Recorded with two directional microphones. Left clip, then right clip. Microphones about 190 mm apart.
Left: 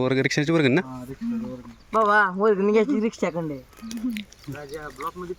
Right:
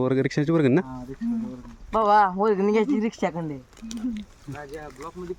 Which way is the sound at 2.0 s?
20° right (ahead or behind).